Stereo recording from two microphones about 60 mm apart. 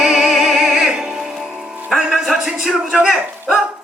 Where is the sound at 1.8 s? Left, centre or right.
Centre.